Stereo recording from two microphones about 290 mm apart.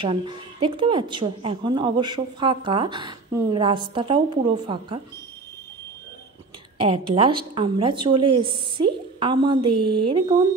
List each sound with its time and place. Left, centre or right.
0.0 s a woman's voice: centre
6.8 s a woman's voice: centre
9.7 s speech: right
10.0 s a woman's voice: centre